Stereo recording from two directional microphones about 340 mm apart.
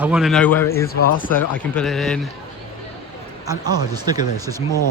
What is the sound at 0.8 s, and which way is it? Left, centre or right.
Speech, left.